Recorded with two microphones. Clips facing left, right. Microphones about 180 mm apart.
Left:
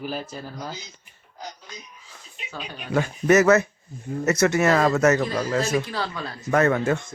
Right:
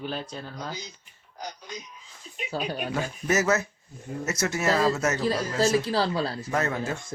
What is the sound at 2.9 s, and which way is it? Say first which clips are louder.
Speech: left 9 dB; 65° left (ahead or behind).